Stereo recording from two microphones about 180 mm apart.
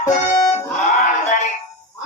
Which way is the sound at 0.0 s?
20° left (ahead or behind).